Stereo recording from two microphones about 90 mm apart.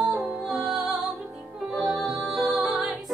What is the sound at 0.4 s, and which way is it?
Music, 5° right (ahead or behind).